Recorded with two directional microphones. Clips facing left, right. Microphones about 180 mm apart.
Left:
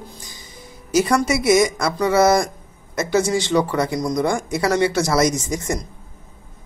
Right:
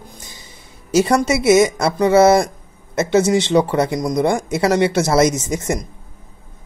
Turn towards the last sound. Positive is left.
turn(degrees=-20)  # may be behind; listen again after turning